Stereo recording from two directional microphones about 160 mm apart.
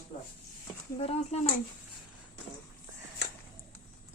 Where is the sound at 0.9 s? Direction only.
40° left (ahead or behind).